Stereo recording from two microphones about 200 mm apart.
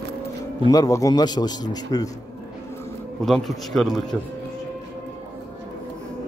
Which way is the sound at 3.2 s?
Centre (ahead or behind).